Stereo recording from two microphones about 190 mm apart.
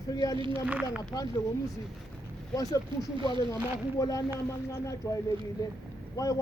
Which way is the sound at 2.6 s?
20° left (ahead or behind).